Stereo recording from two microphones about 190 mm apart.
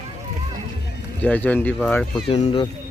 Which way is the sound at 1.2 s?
10° left (ahead or behind).